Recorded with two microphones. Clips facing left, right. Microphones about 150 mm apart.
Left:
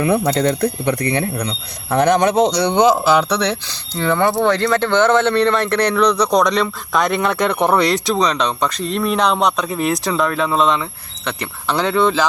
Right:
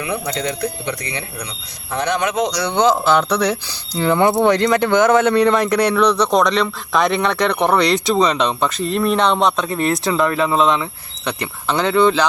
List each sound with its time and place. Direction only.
0.3 s speech: 50° left (ahead or behind)
2.1 s speech: 35° left (ahead or behind)
2.7 s speech: 10° left (ahead or behind)